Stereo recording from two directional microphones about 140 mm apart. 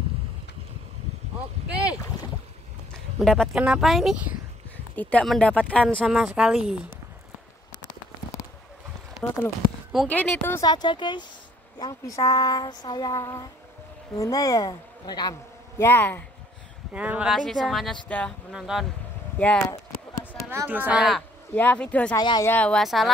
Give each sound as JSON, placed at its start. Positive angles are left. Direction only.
{"t": 2.9, "sound": "a sound", "side_deg": 5}
{"t": 3.6, "sound": "speech", "side_deg": -5}
{"t": 4.9, "sound": "speech", "side_deg": 5}
{"t": 9.1, "sound": "a woman's voice", "side_deg": 5}
{"t": 10.6, "sound": "speech", "side_deg": 30}
{"t": 11.8, "sound": "child singing", "side_deg": 25}
{"t": 15.8, "sound": "a woman's voice", "side_deg": 15}
{"t": 16.9, "sound": "a woman's voice", "side_deg": -10}
{"t": 18.5, "sound": "speech", "side_deg": -5}
{"t": 19.3, "sound": "speech", "side_deg": 10}
{"t": 20.4, "sound": "a woman's voice", "side_deg": -15}
{"t": 21.5, "sound": "a woman's voice", "side_deg": 10}
{"t": 22.1, "sound": "child singing", "side_deg": 30}
{"t": 22.5, "sound": "speech", "side_deg": 10}